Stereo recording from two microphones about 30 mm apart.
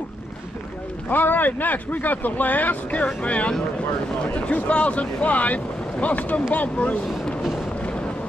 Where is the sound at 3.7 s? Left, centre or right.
Left.